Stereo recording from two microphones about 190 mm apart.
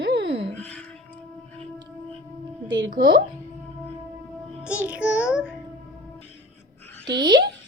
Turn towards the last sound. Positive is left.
turn(degrees=-25)  # may be behind; listen again after turning